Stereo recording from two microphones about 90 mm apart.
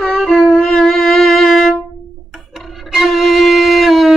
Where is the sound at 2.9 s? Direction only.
5° right (ahead or behind).